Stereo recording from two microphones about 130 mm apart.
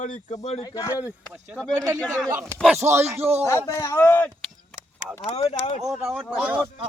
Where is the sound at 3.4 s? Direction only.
20° left (ahead or behind).